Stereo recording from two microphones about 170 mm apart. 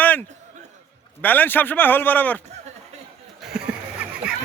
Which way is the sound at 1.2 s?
10° left (ahead or behind).